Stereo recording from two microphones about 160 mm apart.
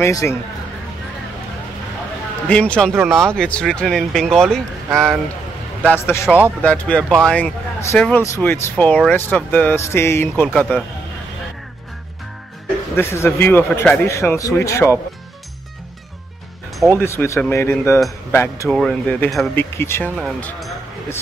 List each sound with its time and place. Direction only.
0.0 s speech: 15° left (ahead or behind)
2.4 s speech: 10° left (ahead or behind)
12.9 s speech: 15° left (ahead or behind)
17.0 s speech: 15° left (ahead or behind)
18.7 s speech: 5° left (ahead or behind)